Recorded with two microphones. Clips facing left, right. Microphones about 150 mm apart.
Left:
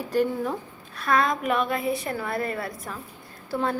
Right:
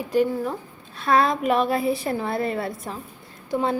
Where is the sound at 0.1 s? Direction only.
10° right (ahead or behind).